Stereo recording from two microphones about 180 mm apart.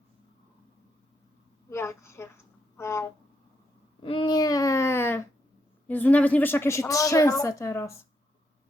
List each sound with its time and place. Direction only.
1.7 s a woman's voice: 15° left (ahead or behind)
4.0 s a woman's voice: 30° left (ahead or behind); by 7.9 s 15° left (ahead or behind)